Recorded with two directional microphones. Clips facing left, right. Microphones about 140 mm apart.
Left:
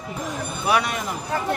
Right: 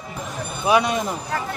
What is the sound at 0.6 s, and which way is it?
Speech, 20° right (ahead or behind).